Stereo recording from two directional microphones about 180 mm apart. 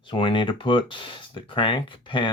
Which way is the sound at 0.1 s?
30° left (ahead or behind).